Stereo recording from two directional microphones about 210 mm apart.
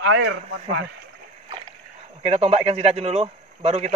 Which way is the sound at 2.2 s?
30° right (ahead or behind).